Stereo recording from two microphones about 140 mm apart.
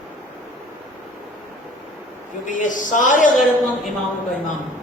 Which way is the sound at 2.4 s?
65° left (ahead or behind).